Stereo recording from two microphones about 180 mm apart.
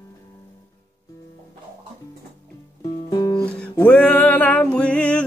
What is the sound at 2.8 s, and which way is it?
Music, 25° left (ahead or behind).